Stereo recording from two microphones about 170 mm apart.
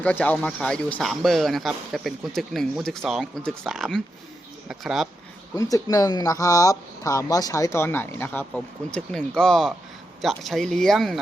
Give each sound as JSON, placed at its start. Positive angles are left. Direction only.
{"t": 0.0, "sound": "speech", "side_deg": 10}
{"t": 5.5, "sound": "speech", "side_deg": 20}